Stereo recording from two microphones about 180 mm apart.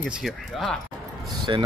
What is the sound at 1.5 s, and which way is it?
Speech, 25° right (ahead or behind).